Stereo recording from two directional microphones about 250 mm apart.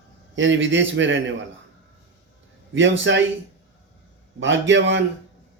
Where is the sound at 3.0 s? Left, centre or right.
Right.